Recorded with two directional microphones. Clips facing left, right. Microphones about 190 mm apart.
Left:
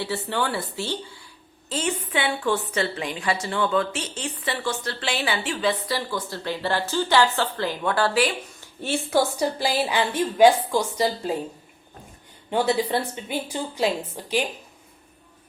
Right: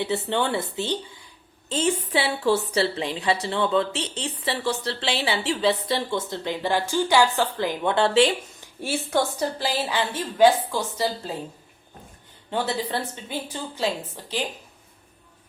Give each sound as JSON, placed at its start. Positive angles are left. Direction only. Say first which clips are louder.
{"t": 0.0, "sound": "speech", "louder": "right 2 dB", "side_deg": -20}
{"t": 1.7, "sound": "a woman's voice", "louder": "right 3 dB", "side_deg": -30}
{"t": 9.0, "sound": "a woman's voice", "louder": "left 3 dB", "side_deg": 10}
{"t": 12.5, "sound": "a woman's voice", "louder": "left 4 dB", "side_deg": 15}